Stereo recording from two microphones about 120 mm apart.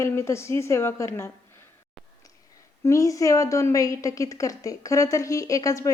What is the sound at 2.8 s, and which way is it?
A woman's voice, 25° left (ahead or behind).